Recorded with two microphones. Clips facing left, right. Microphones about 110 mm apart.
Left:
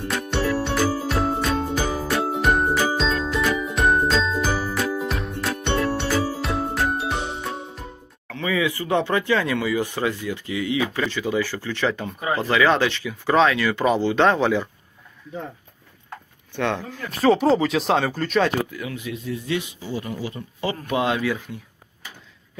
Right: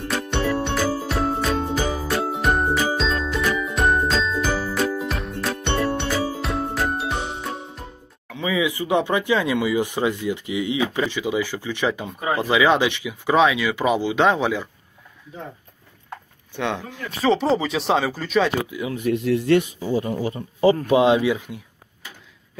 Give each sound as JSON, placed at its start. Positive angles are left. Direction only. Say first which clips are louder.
{"t": 0.3, "sound": "music", "louder": "even", "side_deg": 0}
{"t": 5.4, "sound": "jingle", "louder": "even", "side_deg": 0}
{"t": 8.3, "sound": "speech", "louder": "right 1 dB", "side_deg": -15}
{"t": 16.5, "sound": "speech", "louder": "left 1 dB", "side_deg": -15}
{"t": 17.2, "sound": "speech", "louder": "left 2 dB", "side_deg": 0}
{"t": 18.9, "sound": "speech", "louder": "right 13 dB", "side_deg": -65}
{"t": 19.8, "sound": "speech", "louder": "right 6 dB", "side_deg": -35}